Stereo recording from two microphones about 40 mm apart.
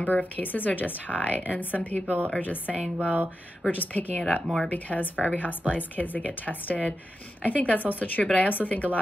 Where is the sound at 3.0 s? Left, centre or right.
Right.